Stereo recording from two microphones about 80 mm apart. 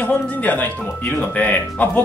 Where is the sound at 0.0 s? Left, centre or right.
Left.